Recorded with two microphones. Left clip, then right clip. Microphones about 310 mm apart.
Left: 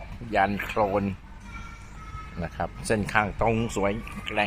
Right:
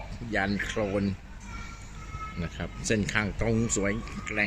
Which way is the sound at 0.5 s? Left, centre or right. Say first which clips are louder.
Left 4 dB; left.